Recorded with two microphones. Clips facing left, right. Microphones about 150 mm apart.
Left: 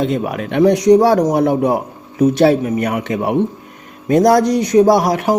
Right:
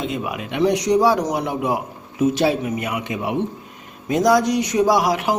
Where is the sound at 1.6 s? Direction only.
35° left (ahead or behind).